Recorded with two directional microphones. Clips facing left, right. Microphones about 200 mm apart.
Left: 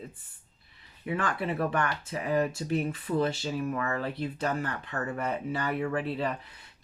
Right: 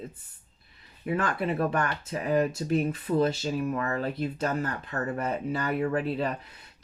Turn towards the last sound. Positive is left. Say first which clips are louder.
# right 2 dB
turn(degrees=-40)  # may be behind; listen again after turning